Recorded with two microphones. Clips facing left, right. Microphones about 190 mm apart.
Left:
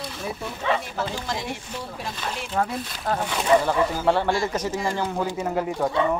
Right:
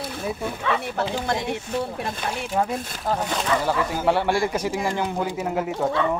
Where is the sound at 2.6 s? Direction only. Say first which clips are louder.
Right 1 dB; 15° right (ahead or behind).